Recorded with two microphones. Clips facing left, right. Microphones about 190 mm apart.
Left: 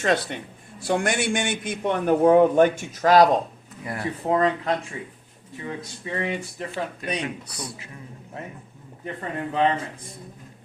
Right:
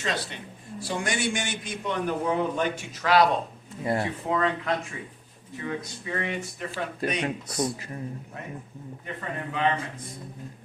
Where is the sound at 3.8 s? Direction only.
25° right (ahead or behind).